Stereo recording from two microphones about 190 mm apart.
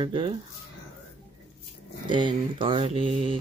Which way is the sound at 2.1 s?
25° right (ahead or behind).